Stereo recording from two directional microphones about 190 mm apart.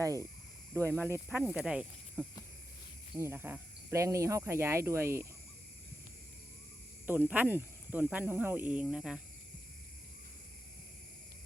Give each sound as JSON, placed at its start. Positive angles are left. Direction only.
{"t": 0.0, "sound": "speech", "side_deg": -15}
{"t": 7.1, "sound": "speech", "side_deg": -10}